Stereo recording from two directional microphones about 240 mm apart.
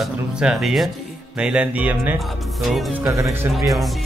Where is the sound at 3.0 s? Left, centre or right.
Centre.